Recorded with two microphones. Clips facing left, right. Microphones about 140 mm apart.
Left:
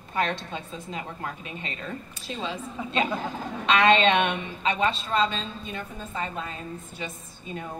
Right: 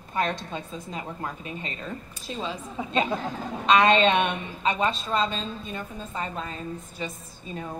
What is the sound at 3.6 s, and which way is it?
A woman's voice, 40° right (ahead or behind).